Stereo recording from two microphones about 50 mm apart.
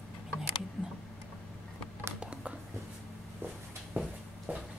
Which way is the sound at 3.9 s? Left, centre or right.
Right.